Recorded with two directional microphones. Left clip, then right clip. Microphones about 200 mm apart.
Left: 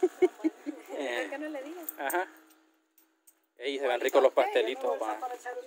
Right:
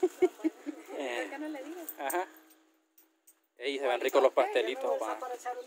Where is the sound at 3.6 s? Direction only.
Centre (ahead or behind).